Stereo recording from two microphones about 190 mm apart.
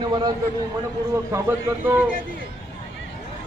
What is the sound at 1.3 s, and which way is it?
Speech, 10° right (ahead or behind).